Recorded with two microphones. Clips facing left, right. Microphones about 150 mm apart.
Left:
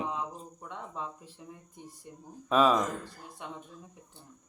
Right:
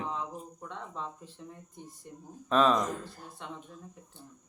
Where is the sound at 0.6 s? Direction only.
10° left (ahead or behind).